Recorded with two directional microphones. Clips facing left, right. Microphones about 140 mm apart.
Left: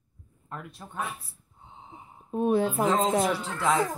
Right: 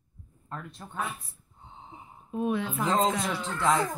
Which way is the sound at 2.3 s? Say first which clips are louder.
Left 5 dB; 35° left (ahead or behind).